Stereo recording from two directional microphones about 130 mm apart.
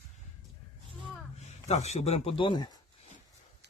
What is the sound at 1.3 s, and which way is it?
Speech, 55° left (ahead or behind).